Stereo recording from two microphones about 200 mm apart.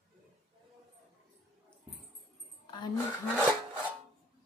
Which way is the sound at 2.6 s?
20° left (ahead or behind).